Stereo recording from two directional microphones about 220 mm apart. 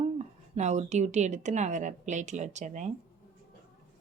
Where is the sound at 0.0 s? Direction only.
30° right (ahead or behind).